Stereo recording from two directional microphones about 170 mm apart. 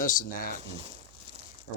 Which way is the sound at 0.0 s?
55° left (ahead or behind).